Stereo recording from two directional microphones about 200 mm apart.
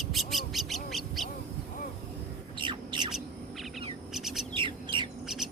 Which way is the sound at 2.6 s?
25° right (ahead or behind).